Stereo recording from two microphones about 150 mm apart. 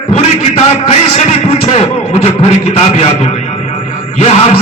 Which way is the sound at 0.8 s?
45° left (ahead or behind).